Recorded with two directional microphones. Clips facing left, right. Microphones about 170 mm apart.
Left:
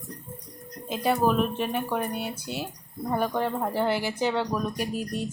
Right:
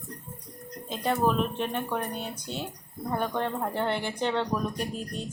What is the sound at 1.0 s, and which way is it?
Speech, 5° left (ahead or behind).